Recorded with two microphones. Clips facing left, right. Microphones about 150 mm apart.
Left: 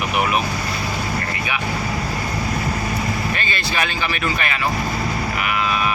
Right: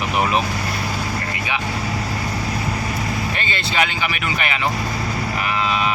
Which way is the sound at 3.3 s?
20° right (ahead or behind).